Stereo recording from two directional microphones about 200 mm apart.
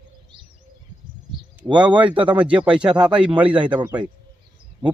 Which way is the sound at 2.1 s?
25° right (ahead or behind).